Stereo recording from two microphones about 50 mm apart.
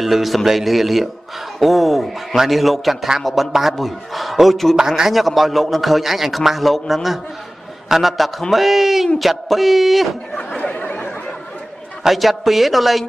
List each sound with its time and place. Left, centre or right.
0.0 s a man's voice: centre
4.7 s a man's voice: centre
10.3 s chatter: left
12.0 s a man's voice: centre